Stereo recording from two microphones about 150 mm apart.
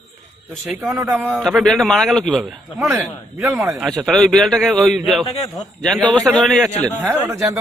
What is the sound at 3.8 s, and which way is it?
A man's voice, centre (ahead or behind).